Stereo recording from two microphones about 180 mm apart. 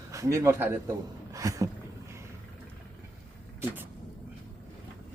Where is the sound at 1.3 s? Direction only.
20° right (ahead or behind).